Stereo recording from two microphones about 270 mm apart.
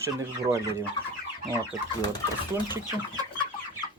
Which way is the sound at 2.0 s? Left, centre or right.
Centre.